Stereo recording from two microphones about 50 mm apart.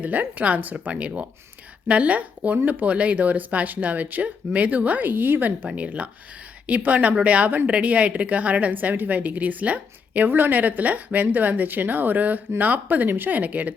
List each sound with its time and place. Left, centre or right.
0.0 s a woman's voice: right
10.2 s speech: right